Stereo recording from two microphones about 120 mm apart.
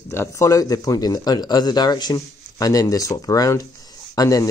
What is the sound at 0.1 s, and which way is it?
A man's voice, 25° left (ahead or behind).